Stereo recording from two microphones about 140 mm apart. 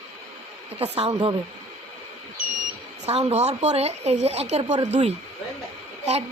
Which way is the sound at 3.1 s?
45° right (ahead or behind).